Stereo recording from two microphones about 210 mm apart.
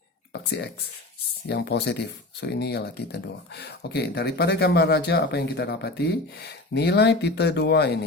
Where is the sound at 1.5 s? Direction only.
55° left (ahead or behind).